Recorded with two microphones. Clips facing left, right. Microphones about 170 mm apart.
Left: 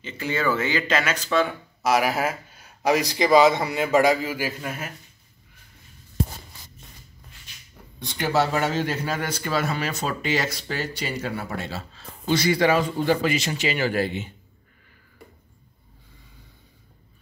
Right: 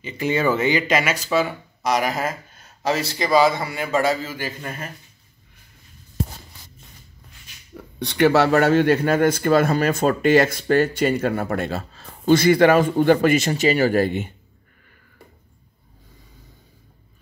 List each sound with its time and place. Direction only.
0.0 s speech: 20° right (ahead or behind)
1.8 s speech: 5° left (ahead or behind)
7.7 s speech: 70° right (ahead or behind); by 14.3 s 50° right (ahead or behind)